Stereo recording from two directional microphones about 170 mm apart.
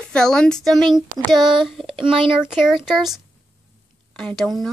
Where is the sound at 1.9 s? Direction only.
30° right (ahead or behind).